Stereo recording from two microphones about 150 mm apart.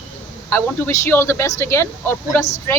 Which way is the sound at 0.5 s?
15° left (ahead or behind).